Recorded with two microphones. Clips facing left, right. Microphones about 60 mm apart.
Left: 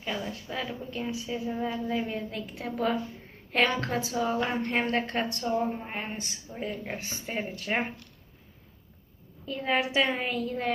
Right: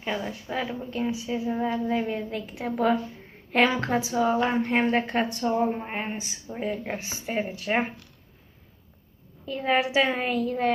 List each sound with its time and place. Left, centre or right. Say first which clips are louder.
0.0 s a woman's voice: right 3 dB; centre
5.7 s a woman's voice: right 4 dB; centre
9.5 s a woman's voice: right 4 dB; centre